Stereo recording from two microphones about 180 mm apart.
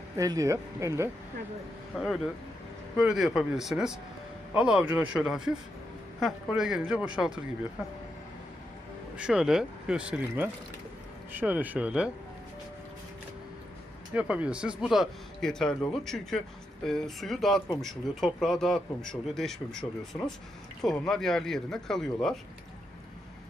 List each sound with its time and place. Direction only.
0.2 s speech: 20° right (ahead or behind)
3.0 s speech: centre (ahead or behind)
9.1 s speech: 5° right (ahead or behind)
14.1 s speech: 5° right (ahead or behind)
19.8 s speech: 10° left (ahead or behind)